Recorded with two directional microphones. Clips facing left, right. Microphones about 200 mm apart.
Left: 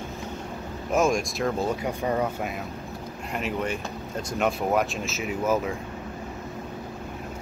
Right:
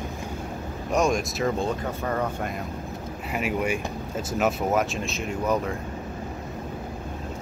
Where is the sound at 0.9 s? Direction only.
Centre (ahead or behind).